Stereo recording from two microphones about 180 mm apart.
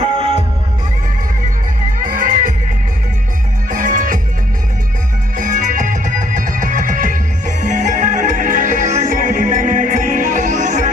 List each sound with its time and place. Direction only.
0.0 s music: 35° right (ahead or behind)
2.0 s music: 50° right (ahead or behind)
3.7 s music: 50° right (ahead or behind)
5.4 s music: 45° right (ahead or behind)